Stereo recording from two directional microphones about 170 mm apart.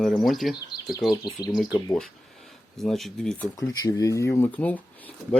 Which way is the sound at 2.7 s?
Centre (ahead or behind).